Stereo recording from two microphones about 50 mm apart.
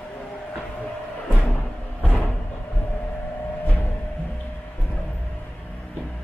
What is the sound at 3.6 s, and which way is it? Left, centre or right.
Music, left.